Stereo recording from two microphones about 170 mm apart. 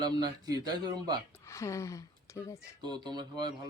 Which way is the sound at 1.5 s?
20° left (ahead or behind).